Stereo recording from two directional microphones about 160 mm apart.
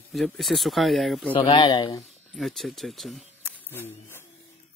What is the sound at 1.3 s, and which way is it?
Speech, 35° left (ahead or behind).